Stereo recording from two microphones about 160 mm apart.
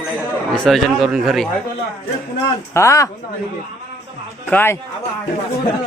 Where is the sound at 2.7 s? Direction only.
20° left (ahead or behind).